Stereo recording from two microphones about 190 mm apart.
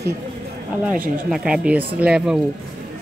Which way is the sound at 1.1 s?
5° right (ahead or behind).